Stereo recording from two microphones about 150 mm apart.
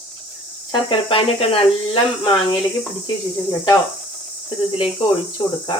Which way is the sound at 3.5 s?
25° left (ahead or behind).